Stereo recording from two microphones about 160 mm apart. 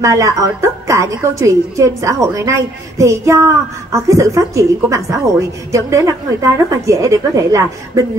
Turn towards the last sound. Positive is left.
turn(degrees=-20)  # may be behind; listen again after turning